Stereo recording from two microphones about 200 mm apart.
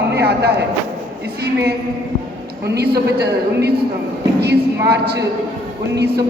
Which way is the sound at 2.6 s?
55° right (ahead or behind).